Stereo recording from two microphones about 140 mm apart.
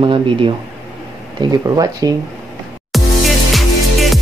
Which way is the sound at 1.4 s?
25° right (ahead or behind).